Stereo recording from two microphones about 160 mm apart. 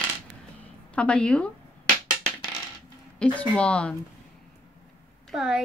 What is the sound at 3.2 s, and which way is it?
Speech, 5° left (ahead or behind).